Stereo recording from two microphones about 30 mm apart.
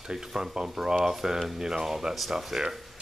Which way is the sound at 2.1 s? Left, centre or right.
Centre.